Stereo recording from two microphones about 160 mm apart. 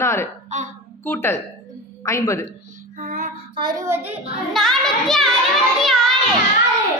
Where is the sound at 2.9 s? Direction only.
55° right (ahead or behind).